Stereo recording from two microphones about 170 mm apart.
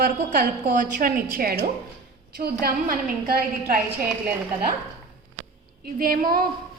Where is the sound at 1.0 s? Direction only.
55° right (ahead or behind).